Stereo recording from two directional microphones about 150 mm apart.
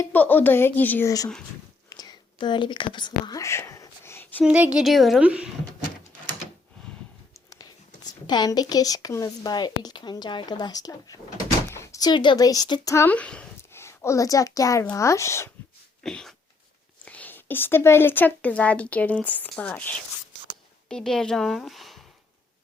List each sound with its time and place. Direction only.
0.0 s a woman's voice: 10° left (ahead or behind)
1.9 s whispering: 25° left (ahead or behind)
4.4 s a woman's voice: 10° right (ahead or behind)
8.3 s a woman's voice: 25° left (ahead or behind)
16.0 s a woman's voice: 5° left (ahead or behind)